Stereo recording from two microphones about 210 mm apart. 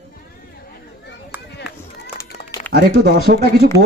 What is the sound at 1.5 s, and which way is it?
Run, 55° left (ahead or behind).